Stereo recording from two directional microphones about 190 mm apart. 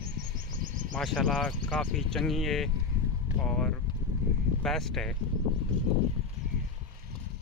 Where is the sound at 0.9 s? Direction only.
5° left (ahead or behind).